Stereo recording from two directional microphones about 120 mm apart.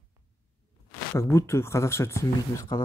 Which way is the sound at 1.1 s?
20° left (ahead or behind).